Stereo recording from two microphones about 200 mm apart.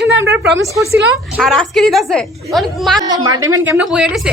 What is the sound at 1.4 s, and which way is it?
A woman's voice, centre (ahead or behind).